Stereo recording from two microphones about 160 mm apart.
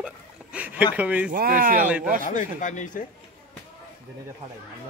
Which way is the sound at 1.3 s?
60° right (ahead or behind).